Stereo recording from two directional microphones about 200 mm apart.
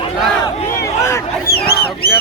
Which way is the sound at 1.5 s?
50° left (ahead or behind).